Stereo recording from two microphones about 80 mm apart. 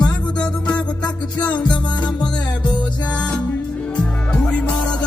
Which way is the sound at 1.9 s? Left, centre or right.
Left.